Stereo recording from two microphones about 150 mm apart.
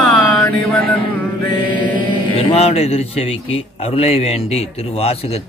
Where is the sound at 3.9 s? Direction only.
45° left (ahead or behind).